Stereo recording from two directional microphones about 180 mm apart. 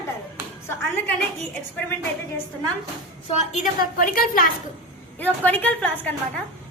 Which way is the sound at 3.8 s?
50° left (ahead or behind).